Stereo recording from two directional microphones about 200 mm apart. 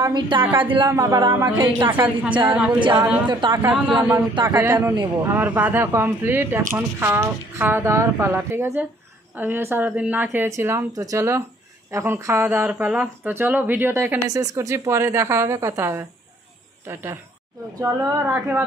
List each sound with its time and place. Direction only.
0.0 s speech: 25° right (ahead or behind); by 2.7 s 10° right (ahead or behind)
3.3 s speech: 25° right (ahead or behind)
3.6 s speech: 5° right (ahead or behind)